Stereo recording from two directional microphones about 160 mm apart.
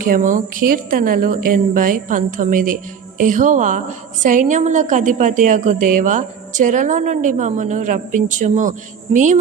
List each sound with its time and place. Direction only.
0.0 s a woman's voice: 55° right (ahead or behind)